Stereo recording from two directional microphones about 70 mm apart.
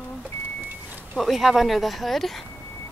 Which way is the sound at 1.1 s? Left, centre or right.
Centre.